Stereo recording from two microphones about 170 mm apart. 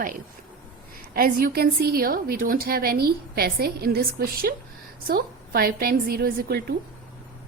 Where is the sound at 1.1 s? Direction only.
60° right (ahead or behind).